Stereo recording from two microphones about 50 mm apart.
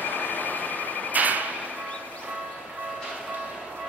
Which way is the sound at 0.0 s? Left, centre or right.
Left.